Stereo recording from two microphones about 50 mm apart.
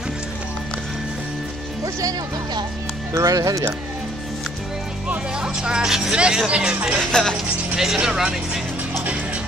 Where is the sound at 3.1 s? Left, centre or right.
Right.